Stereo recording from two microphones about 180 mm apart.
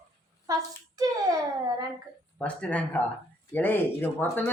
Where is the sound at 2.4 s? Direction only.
5° left (ahead or behind).